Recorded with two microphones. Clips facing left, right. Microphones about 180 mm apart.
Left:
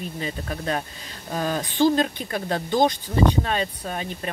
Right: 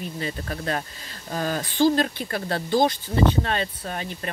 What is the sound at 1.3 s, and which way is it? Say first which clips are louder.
Speech: left 1 dB; 20° left (ahead or behind).